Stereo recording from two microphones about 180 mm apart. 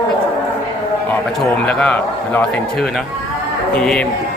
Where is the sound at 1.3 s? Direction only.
5° left (ahead or behind).